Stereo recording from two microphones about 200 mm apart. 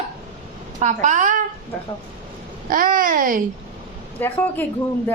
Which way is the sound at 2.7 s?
45° right (ahead or behind).